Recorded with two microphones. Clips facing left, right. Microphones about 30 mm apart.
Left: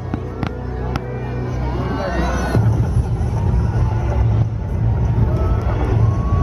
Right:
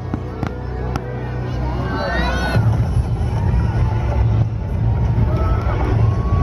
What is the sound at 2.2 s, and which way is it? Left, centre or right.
Music, right.